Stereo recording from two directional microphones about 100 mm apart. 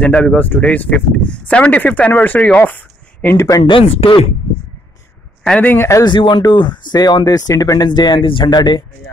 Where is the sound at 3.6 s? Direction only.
65° left (ahead or behind).